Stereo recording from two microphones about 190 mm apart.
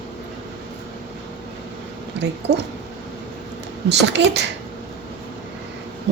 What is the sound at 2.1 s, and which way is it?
Speech, 65° right (ahead or behind).